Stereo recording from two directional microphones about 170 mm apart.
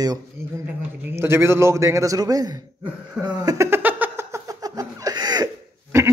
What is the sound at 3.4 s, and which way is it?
Laughter, 20° right (ahead or behind).